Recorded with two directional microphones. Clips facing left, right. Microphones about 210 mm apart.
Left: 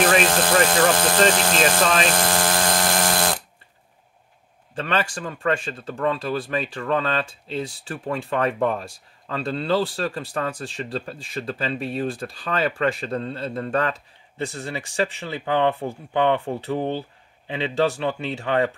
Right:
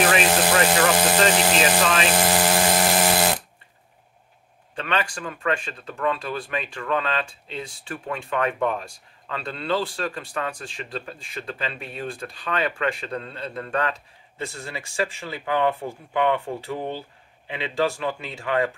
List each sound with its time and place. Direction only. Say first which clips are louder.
0.2 s speech: left 1 dB; 10° right (ahead or behind)
2.0 s electric toothbrush: right 1 dB; 10° right (ahead or behind)
4.7 s speech: left 2 dB; 35° left (ahead or behind)